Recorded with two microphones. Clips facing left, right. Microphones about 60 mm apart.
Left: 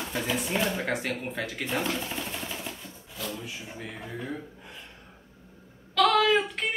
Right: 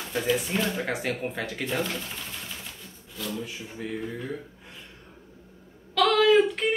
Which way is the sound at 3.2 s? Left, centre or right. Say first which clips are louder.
Right 3 dB; centre.